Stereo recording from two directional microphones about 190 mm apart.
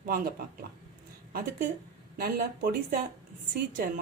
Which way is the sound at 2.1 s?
55° right (ahead or behind).